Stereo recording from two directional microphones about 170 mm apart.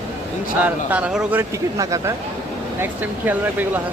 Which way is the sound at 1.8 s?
20° right (ahead or behind).